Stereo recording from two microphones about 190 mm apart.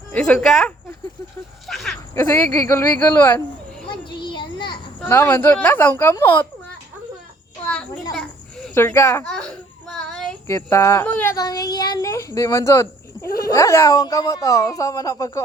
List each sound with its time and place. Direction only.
0.1 s speech: 5° left (ahead or behind)
2.1 s speech: 10° left (ahead or behind)
3.8 s children playing: 25° left (ahead or behind)
4.9 s speech: 10° left (ahead or behind)
8.7 s speech: 10° left (ahead or behind)
9.8 s child singing: centre (ahead or behind)
10.4 s speech: 15° left (ahead or behind)